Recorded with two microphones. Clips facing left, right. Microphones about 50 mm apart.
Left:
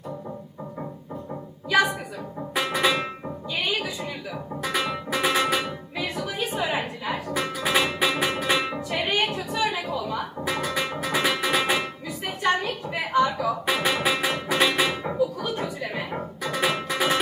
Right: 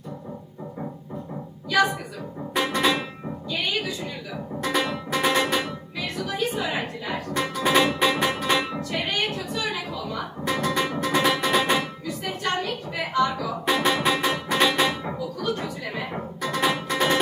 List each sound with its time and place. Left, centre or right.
2.6 s music: centre
3.5 s music: left
4.6 s music: centre
13.7 s music: centre